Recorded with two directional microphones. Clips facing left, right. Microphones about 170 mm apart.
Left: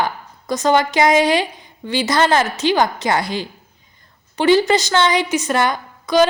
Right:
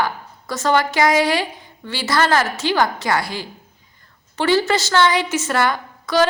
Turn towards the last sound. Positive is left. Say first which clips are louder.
# left 3 dB
turn(degrees=15)  # may be behind; listen again after turning